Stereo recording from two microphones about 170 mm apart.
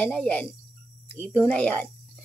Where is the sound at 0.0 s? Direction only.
10° left (ahead or behind).